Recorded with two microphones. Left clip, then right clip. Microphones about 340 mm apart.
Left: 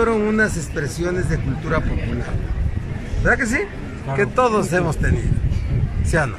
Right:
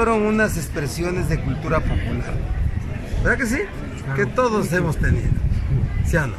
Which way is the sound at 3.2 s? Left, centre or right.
Centre.